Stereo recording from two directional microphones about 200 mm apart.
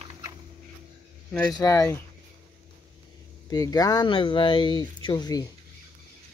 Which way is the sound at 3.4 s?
20° left (ahead or behind).